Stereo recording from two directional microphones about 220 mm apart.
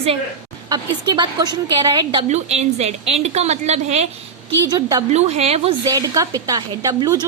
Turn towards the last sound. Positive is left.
turn(degrees=-20)  # may be behind; listen again after turning